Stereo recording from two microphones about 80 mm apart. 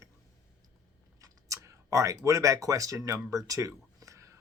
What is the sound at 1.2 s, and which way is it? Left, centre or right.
Speech, right.